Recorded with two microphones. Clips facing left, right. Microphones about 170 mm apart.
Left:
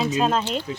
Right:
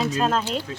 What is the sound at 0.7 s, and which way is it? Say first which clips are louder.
Speech: left 3 dB; 20° left (ahead or behind).